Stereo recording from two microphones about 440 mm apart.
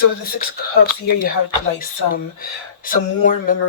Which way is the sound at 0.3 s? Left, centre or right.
Left.